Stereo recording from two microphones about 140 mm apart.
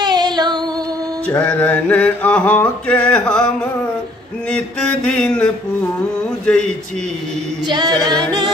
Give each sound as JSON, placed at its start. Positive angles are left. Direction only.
{"t": 0.0, "sound": "music", "side_deg": -30}
{"t": 1.3, "sound": "a sound", "side_deg": 10}
{"t": 4.5, "sound": "a sound", "side_deg": 5}
{"t": 6.4, "sound": "speech", "side_deg": 5}
{"t": 7.6, "sound": "a capella", "side_deg": -30}
{"t": 8.0, "sound": "music", "side_deg": -30}